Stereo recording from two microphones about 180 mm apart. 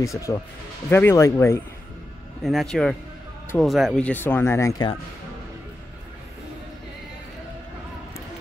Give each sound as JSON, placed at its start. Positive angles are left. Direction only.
{"t": 0.0, "sound": "speech", "side_deg": 15}
{"t": 2.4, "sound": "a man's voice", "side_deg": 0}